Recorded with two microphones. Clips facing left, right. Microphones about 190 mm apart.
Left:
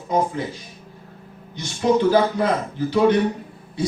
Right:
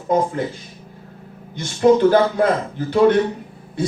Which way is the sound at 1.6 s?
55° right (ahead or behind).